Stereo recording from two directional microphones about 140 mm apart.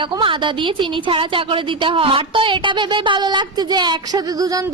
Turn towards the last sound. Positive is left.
turn(degrees=-25)  # may be behind; listen again after turning